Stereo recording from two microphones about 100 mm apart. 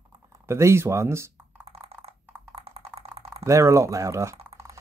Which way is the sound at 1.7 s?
80° right.